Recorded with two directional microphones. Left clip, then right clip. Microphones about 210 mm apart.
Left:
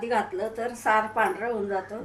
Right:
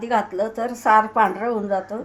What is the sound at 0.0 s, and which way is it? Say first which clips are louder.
A woman's voice: right 5 dB; 40° right (ahead or behind).